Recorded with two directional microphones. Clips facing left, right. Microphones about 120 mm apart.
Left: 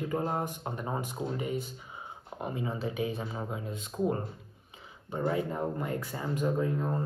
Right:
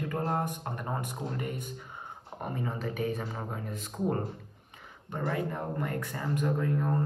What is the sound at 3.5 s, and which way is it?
Speech, 50° right (ahead or behind).